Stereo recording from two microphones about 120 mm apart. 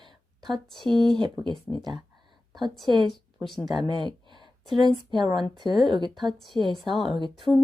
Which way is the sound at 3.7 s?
40° right (ahead or behind).